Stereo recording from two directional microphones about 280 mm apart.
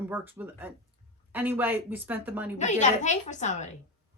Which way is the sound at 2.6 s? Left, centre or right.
Left.